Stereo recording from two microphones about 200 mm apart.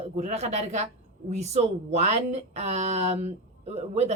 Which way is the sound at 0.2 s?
35° right (ahead or behind).